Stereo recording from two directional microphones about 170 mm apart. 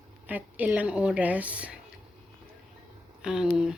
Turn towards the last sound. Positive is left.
turn(degrees=-5)  # may be behind; listen again after turning